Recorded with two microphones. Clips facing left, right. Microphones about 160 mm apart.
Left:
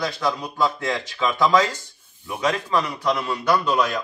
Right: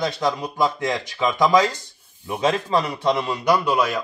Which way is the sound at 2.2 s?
30° right (ahead or behind).